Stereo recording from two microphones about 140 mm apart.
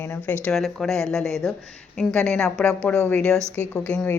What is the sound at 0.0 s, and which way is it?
Speech, 15° left (ahead or behind).